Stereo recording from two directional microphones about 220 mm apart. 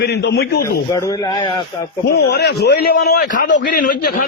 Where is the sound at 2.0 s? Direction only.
45° left (ahead or behind).